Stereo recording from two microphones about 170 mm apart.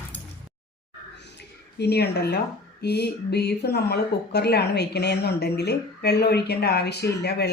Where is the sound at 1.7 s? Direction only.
75° left (ahead or behind).